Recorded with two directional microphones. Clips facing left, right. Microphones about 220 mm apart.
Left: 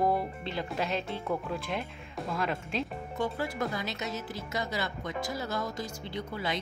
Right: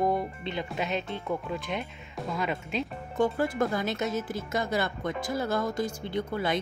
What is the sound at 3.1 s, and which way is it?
Speech, 50° right (ahead or behind).